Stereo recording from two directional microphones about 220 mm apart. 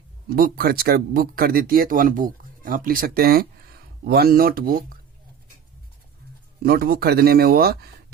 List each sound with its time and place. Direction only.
0.3 s speech: 40° right (ahead or behind)
6.6 s speech: 45° right (ahead or behind)